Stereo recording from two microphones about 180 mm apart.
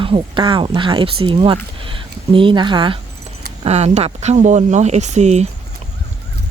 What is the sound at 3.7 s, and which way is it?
Speech, 35° right (ahead or behind).